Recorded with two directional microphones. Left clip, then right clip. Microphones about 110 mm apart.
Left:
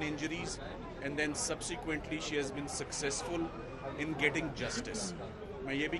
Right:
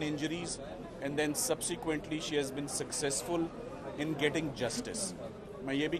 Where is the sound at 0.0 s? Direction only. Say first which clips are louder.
Right 1 dB; 40° right (ahead or behind).